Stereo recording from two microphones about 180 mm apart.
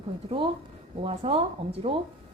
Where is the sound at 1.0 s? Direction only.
30° right (ahead or behind).